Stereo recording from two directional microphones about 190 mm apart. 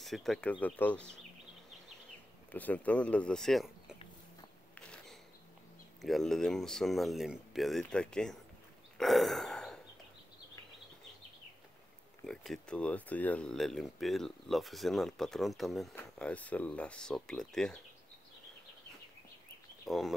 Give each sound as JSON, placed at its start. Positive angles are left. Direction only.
{"t": 0.0, "sound": "speech", "side_deg": 0}
{"t": 2.5, "sound": "speech", "side_deg": 10}
{"t": 4.7, "sound": "a sound", "side_deg": 5}
{"t": 6.0, "sound": "speech", "side_deg": 0}
{"t": 8.9, "sound": "a sound", "side_deg": 0}
{"t": 12.3, "sound": "speech", "side_deg": 5}
{"t": 19.9, "sound": "speech", "side_deg": 0}